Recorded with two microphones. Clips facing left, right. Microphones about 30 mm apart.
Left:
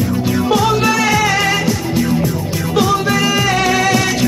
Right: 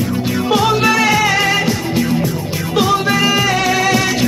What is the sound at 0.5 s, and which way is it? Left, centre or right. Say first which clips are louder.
Music: right 2 dB; right.